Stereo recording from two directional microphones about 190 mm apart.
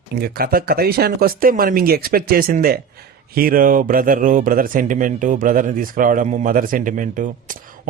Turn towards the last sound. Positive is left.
turn(degrees=-45)  # may be behind; listen again after turning